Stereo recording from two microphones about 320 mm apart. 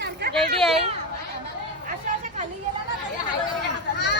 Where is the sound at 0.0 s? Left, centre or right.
Right.